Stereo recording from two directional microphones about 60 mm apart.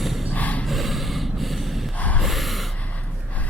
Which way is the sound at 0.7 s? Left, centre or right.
Centre.